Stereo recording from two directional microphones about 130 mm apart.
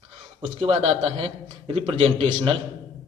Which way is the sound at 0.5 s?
50° right (ahead or behind).